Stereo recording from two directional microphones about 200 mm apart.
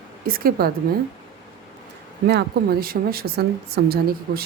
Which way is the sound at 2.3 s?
50° right (ahead or behind).